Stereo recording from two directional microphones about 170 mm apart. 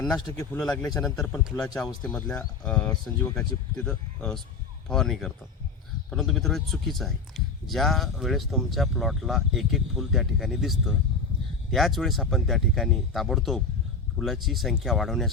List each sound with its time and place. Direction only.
0.0 s speech: 20° left (ahead or behind)
0.6 s a man's voice: 5° left (ahead or behind)